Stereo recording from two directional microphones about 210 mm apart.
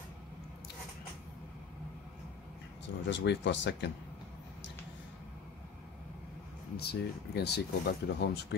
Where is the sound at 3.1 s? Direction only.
55° left (ahead or behind).